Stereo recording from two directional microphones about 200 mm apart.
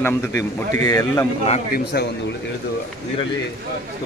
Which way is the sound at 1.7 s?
55° left (ahead or behind).